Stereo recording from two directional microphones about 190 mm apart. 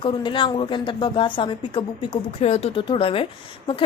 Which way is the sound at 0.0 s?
25° left (ahead or behind).